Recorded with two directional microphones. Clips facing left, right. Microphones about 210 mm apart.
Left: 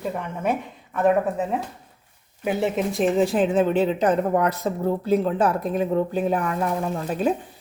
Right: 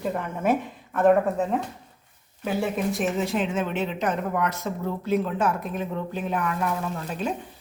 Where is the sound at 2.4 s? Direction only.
20° left (ahead or behind).